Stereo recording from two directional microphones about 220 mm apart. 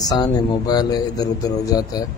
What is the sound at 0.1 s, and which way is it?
Speech, 20° left (ahead or behind).